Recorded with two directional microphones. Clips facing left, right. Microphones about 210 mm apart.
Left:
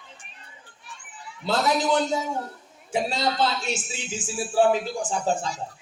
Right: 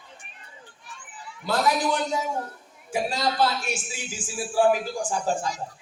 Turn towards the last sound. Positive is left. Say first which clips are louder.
# left 1 dB
turn(degrees=25)  # may be behind; listen again after turning